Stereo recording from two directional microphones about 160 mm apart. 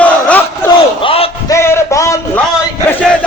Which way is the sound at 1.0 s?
35° left (ahead or behind).